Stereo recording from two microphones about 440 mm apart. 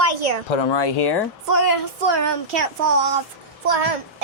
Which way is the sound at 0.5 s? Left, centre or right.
Left.